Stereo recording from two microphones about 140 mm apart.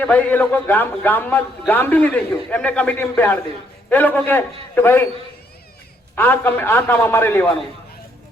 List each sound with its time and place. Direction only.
0.0 s a man's voice: 10° left (ahead or behind)
6.1 s a man's voice: 15° left (ahead or behind)